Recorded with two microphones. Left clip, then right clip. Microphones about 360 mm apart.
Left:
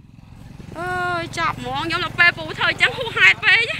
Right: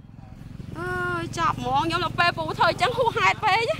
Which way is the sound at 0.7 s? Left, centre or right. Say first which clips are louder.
Left 5 dB; centre.